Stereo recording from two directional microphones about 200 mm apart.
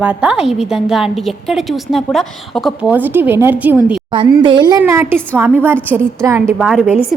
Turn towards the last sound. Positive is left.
turn(degrees=-5)  # may be behind; listen again after turning